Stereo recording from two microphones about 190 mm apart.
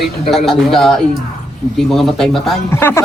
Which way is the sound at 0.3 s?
Centre (ahead or behind).